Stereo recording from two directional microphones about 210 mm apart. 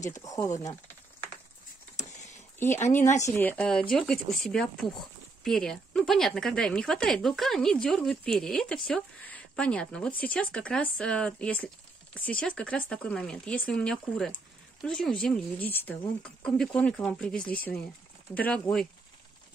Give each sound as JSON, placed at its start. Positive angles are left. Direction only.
{"t": 0.1, "sound": "speech", "side_deg": 15}
{"t": 3.2, "sound": "speech", "side_deg": 10}